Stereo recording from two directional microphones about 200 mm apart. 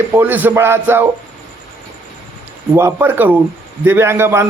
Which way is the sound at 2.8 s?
10° right (ahead or behind).